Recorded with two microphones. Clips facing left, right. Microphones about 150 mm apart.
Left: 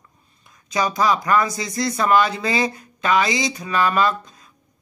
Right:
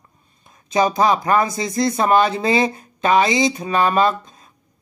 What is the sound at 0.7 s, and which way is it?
Speech, 25° right (ahead or behind).